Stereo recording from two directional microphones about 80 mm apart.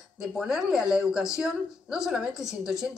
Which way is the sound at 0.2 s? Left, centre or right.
Centre.